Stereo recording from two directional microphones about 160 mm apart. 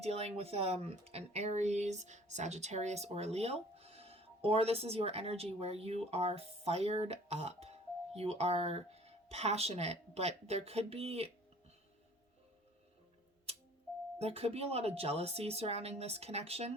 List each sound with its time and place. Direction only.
0.0 s speech: 40° right (ahead or behind)
14.2 s speech: 40° right (ahead or behind)